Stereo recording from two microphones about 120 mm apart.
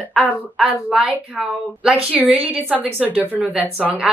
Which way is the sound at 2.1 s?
15° right (ahead or behind).